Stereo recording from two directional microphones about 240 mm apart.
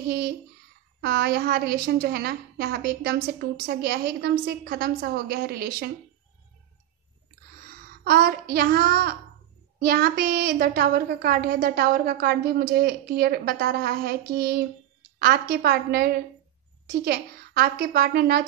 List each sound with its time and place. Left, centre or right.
0.0 s a sound: right
1.0 s a woman's voice: right
7.6 s a child's voice: right